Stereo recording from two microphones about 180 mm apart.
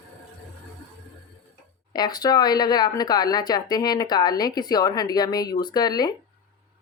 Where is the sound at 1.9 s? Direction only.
20° left (ahead or behind).